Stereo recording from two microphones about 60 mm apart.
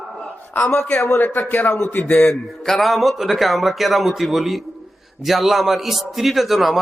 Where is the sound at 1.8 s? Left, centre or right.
Left.